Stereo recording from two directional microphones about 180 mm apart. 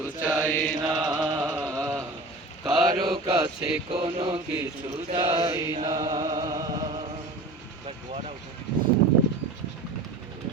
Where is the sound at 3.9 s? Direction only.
30° right (ahead or behind).